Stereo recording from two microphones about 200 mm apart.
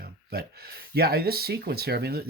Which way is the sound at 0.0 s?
50° right (ahead or behind).